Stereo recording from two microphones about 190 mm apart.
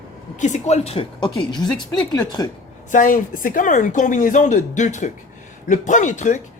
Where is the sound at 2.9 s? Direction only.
45° left (ahead or behind).